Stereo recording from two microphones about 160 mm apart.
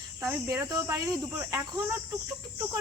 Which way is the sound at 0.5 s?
20° right (ahead or behind).